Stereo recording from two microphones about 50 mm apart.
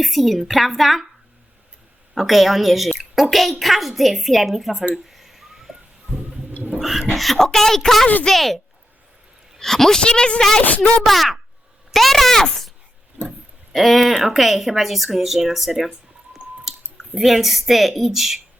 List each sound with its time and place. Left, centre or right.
0.0 s a woman's voice: centre
2.1 s a woman's voice: centre
5.0 s bird: centre
6.7 s a woman's voice: centre
10.0 s speech: centre
11.0 s a woman's voice: centre
13.2 s a sound: centre
13.7 s a woman's voice: centre